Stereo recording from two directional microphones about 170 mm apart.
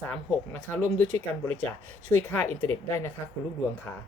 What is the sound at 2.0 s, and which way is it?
Speech, 10° left (ahead or behind).